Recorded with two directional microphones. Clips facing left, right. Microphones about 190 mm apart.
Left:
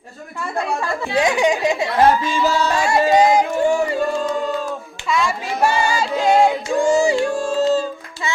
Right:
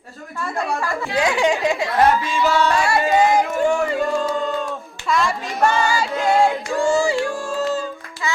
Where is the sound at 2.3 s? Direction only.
35° left (ahead or behind).